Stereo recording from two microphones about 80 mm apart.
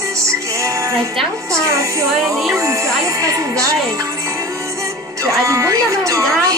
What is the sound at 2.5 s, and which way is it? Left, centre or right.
Music, right.